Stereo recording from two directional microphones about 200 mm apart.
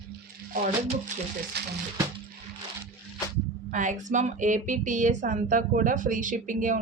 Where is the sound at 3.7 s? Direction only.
40° right (ahead or behind).